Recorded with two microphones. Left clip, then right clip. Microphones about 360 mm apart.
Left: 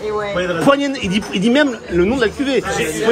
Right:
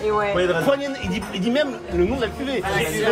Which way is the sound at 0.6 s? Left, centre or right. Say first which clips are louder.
Left 6 dB; left.